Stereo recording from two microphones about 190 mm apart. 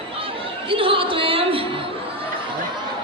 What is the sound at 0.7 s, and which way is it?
Music, 30° right (ahead or behind).